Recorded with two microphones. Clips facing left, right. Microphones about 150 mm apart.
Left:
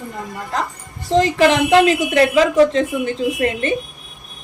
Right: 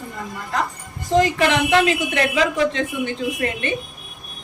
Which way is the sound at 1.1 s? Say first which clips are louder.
Left 3 dB; 35° left (ahead or behind).